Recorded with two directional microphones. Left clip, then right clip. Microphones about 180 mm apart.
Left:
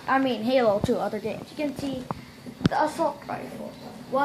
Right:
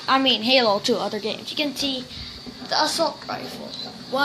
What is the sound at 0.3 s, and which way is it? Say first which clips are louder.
A woman's voice: right 4 dB; 5° right (ahead or behind).